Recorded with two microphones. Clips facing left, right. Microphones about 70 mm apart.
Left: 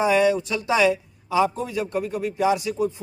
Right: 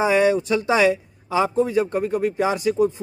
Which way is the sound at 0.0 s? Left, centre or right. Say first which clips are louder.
Right 1 dB; right.